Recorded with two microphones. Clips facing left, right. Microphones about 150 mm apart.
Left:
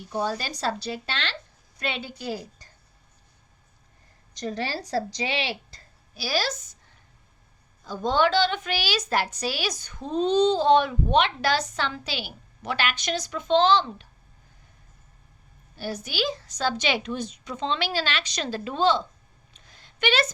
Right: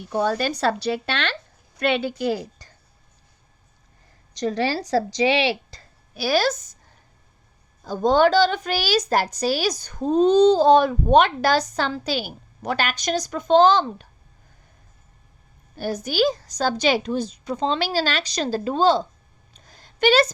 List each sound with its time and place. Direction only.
0.1 s a woman's voice: 60° right (ahead or behind); by 2.6 s 80° right
4.4 s a woman's voice: 90° right
6.2 s a woman's voice: 50° right (ahead or behind)
7.9 s a woman's voice: 45° right (ahead or behind)
15.7 s a woman's voice: 45° right (ahead or behind)
19.5 s a sound: 40° right (ahead or behind)